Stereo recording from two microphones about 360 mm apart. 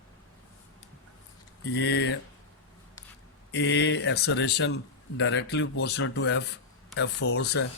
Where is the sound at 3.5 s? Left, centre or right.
Left.